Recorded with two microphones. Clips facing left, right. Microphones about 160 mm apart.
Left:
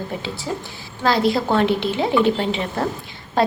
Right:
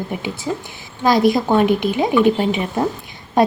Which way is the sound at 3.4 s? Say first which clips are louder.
Right 4 dB; 20° right (ahead or behind).